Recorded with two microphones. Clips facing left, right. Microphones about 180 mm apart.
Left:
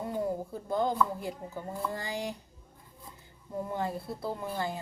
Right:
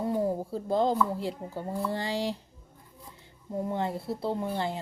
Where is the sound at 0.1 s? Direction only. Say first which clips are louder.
Right 4 dB; 30° right (ahead or behind).